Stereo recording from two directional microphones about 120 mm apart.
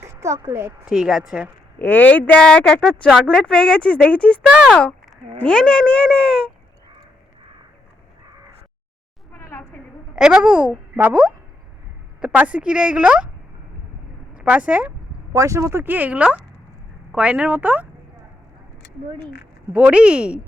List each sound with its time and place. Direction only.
0.0 s a sound: 25° right (ahead or behind)
0.4 s a woman's voice: 20° right (ahead or behind)
0.9 s speech: 5° right (ahead or behind)
1.8 s speech: 15° left (ahead or behind)
4.4 s speech: 10° right (ahead or behind)
4.7 s speech: 5° left (ahead or behind)
9.3 s a sound: 15° left (ahead or behind)
10.2 s speech: 5° right (ahead or behind)
14.3 s speech: 10° right (ahead or behind)
15.3 s speech: 25° right (ahead or behind)
19.7 s speech: 10° right (ahead or behind)